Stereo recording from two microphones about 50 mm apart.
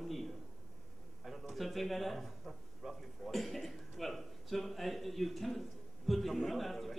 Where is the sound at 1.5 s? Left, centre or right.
Centre.